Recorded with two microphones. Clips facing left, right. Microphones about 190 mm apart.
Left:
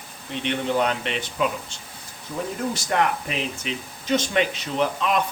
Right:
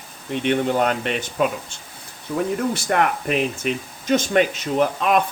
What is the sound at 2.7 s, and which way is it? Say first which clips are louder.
Speech: right 3 dB; 55° right (ahead or behind).